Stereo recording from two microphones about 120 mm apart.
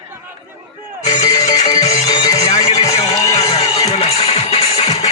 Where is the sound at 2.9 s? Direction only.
70° left (ahead or behind).